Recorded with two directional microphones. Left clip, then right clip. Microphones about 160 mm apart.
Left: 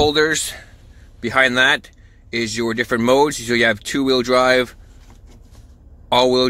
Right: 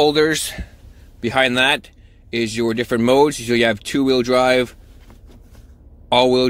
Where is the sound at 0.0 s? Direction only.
10° right (ahead or behind).